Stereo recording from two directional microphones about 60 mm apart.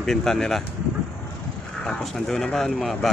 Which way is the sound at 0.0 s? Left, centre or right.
Centre.